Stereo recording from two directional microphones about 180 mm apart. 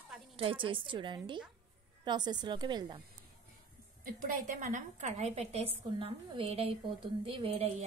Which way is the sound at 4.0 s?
45° right (ahead or behind).